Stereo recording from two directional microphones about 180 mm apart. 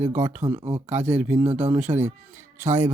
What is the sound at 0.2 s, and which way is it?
Speech, 15° right (ahead or behind).